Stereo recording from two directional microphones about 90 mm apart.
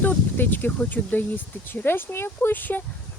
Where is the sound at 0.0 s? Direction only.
20° left (ahead or behind).